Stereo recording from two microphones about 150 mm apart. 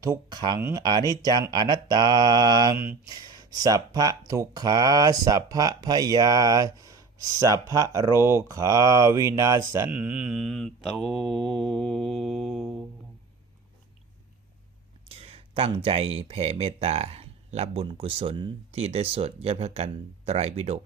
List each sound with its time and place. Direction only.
0.0 s speech: 25° right (ahead or behind)
9.9 s mantra: 5° right (ahead or behind)
15.1 s speech: 40° right (ahead or behind)